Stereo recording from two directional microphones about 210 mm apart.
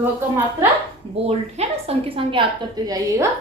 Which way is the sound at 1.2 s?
30° right (ahead or behind).